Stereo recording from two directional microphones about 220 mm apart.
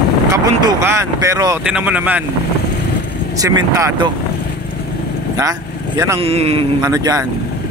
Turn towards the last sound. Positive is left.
turn(degrees=-15)  # may be behind; listen again after turning